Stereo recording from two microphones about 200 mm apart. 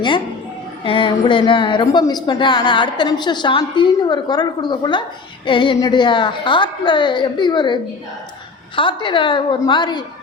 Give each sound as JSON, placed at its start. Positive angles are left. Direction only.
{"t": 0.9, "sound": "speech", "side_deg": 25}